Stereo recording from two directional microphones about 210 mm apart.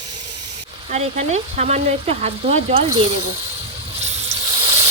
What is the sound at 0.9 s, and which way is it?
Speech, 35° right (ahead or behind).